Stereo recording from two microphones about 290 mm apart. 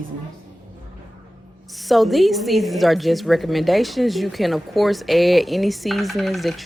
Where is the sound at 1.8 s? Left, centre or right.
Centre.